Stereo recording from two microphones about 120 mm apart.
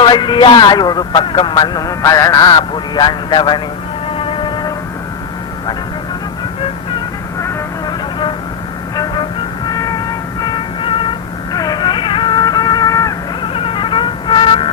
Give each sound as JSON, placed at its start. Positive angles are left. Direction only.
{"t": 0.0, "sound": "a man's voice", "side_deg": 40}
{"t": 4.1, "sound": "music", "side_deg": 50}
{"t": 9.6, "sound": "music", "side_deg": 30}
{"t": 10.4, "sound": "music", "side_deg": 40}
{"t": 11.5, "sound": "music", "side_deg": 35}
{"t": 13.4, "sound": "music", "side_deg": 50}